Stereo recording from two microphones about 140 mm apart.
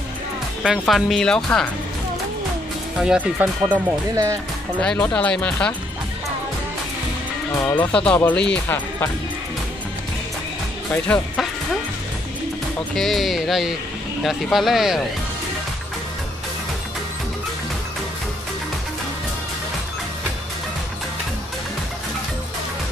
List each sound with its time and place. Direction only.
0.7 s speech: centre (ahead or behind)
3.0 s speech: 10° right (ahead or behind)
4.1 s speech: 20° right (ahead or behind)
4.7 s speech: 10° left (ahead or behind)
7.6 s speech: 15° left (ahead or behind)
10.9 s speech: 10° left (ahead or behind)
12.9 s speech: centre (ahead or behind)